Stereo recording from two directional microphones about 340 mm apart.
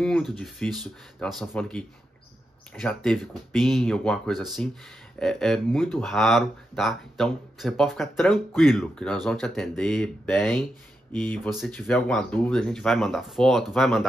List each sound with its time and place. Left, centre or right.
0.0 s speech: centre